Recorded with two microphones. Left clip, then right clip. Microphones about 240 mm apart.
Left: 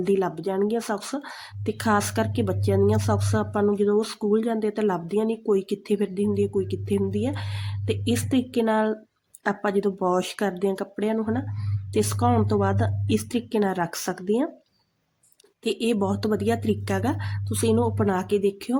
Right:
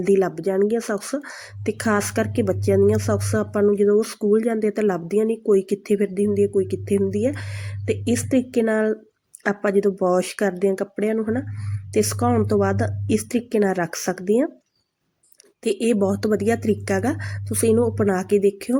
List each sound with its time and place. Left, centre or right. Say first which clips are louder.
0.0 s a woman's voice: right 5 dB; centre
15.7 s a woman's voice: right 4 dB; centre